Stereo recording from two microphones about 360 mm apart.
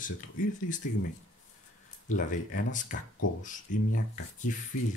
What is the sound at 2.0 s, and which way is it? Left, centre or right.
Speech, left.